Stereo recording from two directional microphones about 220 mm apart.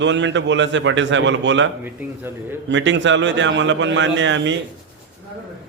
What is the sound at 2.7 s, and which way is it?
A man's voice, 55° right (ahead or behind).